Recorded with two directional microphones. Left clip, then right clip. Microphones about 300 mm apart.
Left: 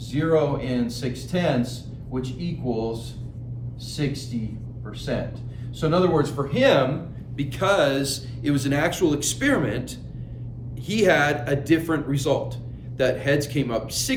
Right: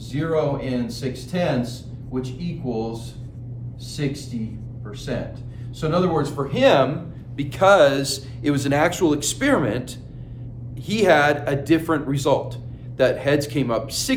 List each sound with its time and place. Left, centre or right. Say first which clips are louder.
0.1 s speech: left 1 dB; centre